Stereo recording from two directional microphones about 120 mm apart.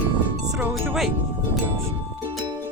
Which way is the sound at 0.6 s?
Centre (ahead or behind).